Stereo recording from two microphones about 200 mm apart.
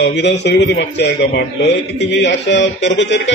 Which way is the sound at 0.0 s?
60° left (ahead or behind).